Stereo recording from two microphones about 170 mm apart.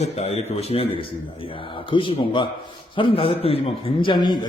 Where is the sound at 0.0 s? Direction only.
40° left (ahead or behind).